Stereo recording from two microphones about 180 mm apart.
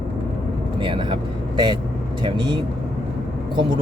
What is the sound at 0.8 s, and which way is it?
Speech, 30° right (ahead or behind).